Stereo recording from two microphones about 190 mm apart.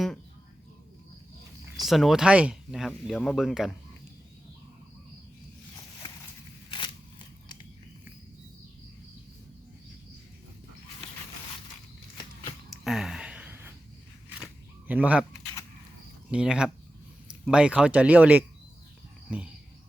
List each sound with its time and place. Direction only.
1.8 s speech: centre (ahead or behind)
6.7 s scissors: 25° left (ahead or behind)
12.7 s a sound: centre (ahead or behind)
14.8 s speech: 10° right (ahead or behind)
16.3 s speech: 5° right (ahead or behind)